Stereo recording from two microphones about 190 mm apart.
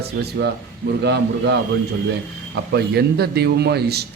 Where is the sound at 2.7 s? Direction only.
60° right (ahead or behind).